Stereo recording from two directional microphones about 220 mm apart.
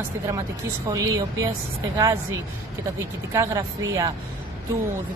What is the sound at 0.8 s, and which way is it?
Speech, 15° right (ahead or behind).